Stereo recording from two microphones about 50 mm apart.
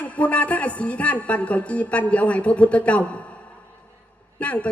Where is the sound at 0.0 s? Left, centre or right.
Left.